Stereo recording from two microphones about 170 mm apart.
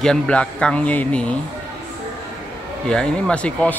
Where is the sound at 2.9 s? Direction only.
5° left (ahead or behind).